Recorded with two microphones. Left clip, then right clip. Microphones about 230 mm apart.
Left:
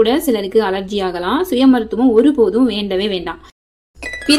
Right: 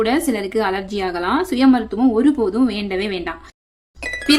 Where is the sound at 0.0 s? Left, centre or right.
Centre.